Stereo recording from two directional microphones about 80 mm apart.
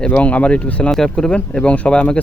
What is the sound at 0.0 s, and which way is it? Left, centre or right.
Speech, centre.